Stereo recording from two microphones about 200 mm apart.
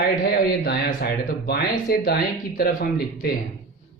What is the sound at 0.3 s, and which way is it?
Speech, 50° left (ahead or behind).